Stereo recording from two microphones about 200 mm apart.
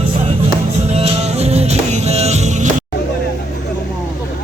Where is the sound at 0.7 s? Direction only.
30° right (ahead or behind).